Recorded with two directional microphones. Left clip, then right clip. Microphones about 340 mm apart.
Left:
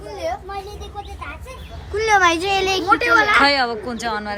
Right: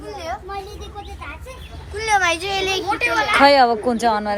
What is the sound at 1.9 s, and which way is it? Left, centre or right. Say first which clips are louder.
Speech: left 3 dB; left.